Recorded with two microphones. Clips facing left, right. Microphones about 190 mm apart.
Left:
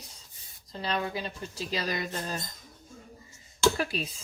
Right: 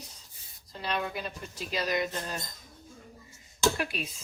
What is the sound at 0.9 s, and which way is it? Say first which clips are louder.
Speech: left 1 dB; 30° left (ahead or behind).